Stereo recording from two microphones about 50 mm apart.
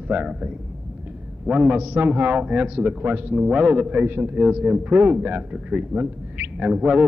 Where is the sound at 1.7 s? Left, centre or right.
Right.